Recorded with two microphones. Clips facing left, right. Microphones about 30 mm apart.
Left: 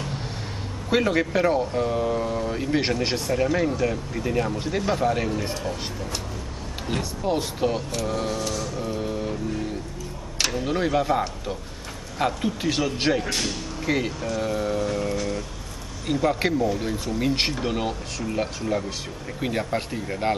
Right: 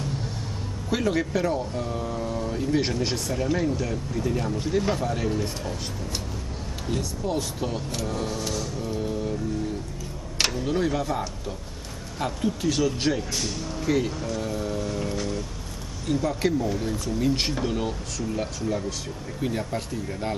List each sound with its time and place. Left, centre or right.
0.8 s speech: left
6.9 s speech: left
8.7 s a sound: centre
10.5 s speech: left
13.2 s speech: left
13.7 s speech: left
16.1 s speech: left